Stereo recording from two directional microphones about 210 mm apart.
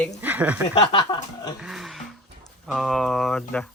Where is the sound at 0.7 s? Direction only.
25° left (ahead or behind).